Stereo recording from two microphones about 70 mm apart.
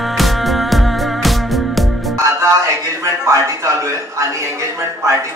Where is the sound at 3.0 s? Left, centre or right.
Right.